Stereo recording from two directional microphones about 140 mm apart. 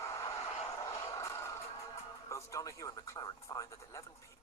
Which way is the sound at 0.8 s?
20° left (ahead or behind).